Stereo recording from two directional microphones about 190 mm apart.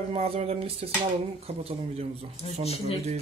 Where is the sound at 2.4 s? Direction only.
30° left (ahead or behind).